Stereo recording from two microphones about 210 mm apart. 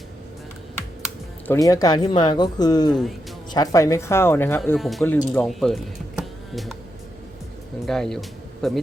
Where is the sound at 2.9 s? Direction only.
Centre (ahead or behind).